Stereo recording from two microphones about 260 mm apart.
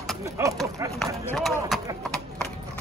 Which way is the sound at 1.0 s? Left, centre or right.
Centre.